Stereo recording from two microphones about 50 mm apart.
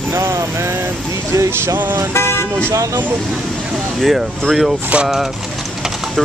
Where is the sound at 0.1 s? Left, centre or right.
Right.